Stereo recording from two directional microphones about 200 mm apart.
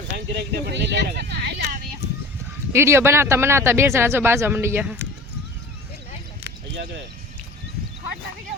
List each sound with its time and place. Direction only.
0.3 s speech: 55° right (ahead or behind)
2.7 s speech: 10° right (ahead or behind)